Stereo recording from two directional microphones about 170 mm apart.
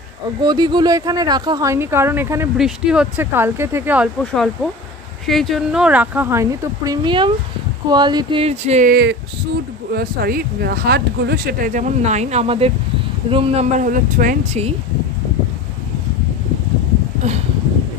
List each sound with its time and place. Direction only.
0.4 s speech: 25° right (ahead or behind)
2.5 s speech: 5° right (ahead or behind)
4.2 s speech: 5° left (ahead or behind); by 8.8 s 40° right (ahead or behind)
8.8 s speech: 65° right (ahead or behind); by 13.7 s 35° right (ahead or behind)
13.7 s speech: 50° right (ahead or behind)